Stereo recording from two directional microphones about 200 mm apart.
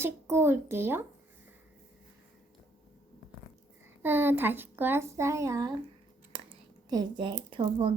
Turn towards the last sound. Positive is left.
turn(degrees=-25)  # may be behind; listen again after turning